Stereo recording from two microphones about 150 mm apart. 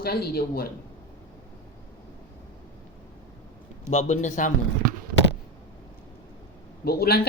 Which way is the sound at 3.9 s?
50° left (ahead or behind).